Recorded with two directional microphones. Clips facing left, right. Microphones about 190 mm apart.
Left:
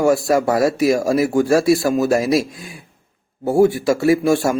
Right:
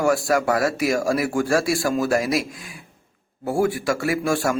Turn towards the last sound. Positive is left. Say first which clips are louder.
# left 7 dB
turn(degrees=25)  # may be behind; listen again after turning